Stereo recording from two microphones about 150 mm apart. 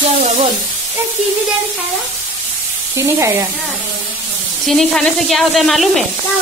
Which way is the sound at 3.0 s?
20° right (ahead or behind).